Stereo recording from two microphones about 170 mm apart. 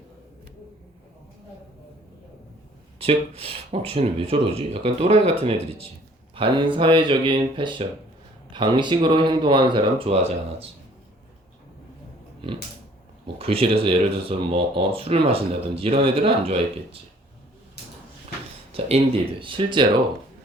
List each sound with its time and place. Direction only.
3.0 s speech: 35° right (ahead or behind)
13.2 s speech: 35° right (ahead or behind)
18.7 s speech: 35° right (ahead or behind)